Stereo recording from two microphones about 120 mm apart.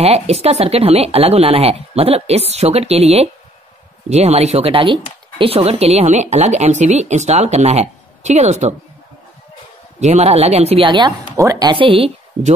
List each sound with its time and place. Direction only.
0.0 s speech: 60° right (ahead or behind)
9.9 s speech: 65° right (ahead or behind)
10.9 s speech: 40° right (ahead or behind)
11.3 s speech: 25° right (ahead or behind)
11.7 s a woman's voice: 50° right (ahead or behind)